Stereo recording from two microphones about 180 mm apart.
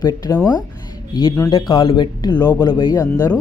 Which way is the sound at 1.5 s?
30° left (ahead or behind).